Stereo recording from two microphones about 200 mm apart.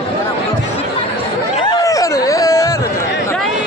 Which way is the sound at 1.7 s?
15° left (ahead or behind).